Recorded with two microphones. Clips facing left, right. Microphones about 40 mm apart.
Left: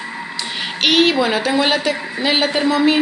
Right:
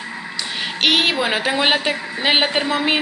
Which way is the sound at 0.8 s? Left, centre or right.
Centre.